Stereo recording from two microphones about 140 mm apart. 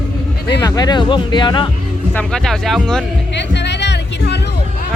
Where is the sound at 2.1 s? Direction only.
5° left (ahead or behind).